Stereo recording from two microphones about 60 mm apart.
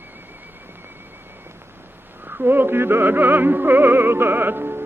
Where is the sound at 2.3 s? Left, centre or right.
Right.